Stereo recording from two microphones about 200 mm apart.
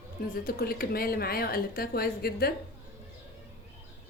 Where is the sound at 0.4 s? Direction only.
50° left (ahead or behind).